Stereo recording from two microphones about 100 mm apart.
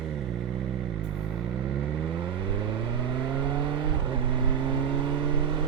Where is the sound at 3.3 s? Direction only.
50° right (ahead or behind).